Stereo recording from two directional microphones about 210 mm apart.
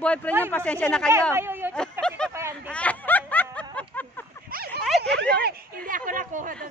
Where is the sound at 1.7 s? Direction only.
5° left (ahead or behind).